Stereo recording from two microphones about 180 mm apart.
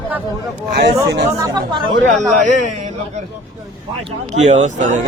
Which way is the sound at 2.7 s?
40° right (ahead or behind).